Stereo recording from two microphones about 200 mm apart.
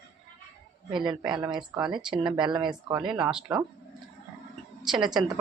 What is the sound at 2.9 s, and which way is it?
Speech, 5° right (ahead or behind).